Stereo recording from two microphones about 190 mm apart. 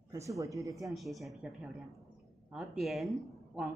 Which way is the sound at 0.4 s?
15° right (ahead or behind).